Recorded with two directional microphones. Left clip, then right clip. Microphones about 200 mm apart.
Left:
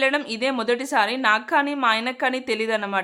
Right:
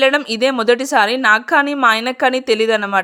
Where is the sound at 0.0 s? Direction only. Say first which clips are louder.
Right 8 dB; 30° right (ahead or behind).